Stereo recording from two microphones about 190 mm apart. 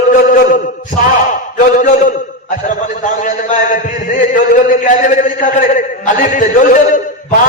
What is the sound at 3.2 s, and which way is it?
A man's voice, 40° left (ahead or behind).